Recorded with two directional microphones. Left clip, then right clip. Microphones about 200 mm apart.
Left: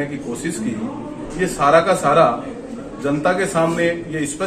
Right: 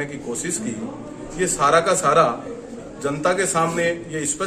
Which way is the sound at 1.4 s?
30° right (ahead or behind).